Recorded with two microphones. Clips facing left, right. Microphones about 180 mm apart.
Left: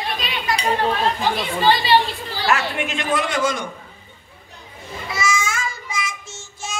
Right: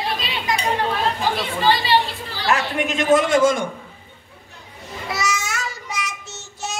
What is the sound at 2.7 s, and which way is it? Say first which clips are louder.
Speech: right 6 dB; 40° right (ahead or behind).